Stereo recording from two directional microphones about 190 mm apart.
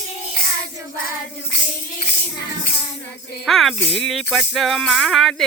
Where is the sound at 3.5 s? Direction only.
Centre (ahead or behind).